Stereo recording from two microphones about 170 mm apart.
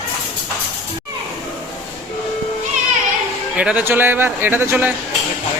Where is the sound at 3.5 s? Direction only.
10° right (ahead or behind).